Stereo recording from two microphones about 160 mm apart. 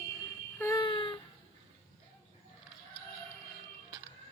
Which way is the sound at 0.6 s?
15° left (ahead or behind).